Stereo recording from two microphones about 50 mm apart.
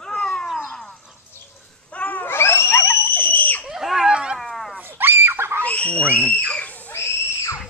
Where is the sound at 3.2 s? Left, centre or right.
Left.